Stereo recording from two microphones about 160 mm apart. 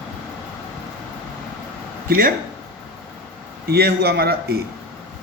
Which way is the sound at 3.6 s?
75° right (ahead or behind).